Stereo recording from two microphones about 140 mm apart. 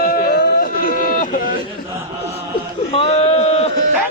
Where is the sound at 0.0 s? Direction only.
90° left.